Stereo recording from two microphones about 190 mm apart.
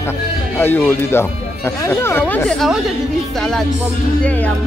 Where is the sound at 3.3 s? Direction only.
Centre (ahead or behind).